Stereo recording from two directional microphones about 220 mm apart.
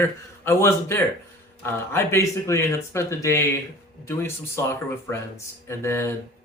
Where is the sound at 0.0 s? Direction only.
10° left (ahead or behind).